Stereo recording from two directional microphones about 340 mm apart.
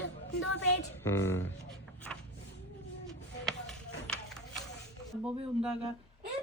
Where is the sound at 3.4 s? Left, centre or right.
Centre.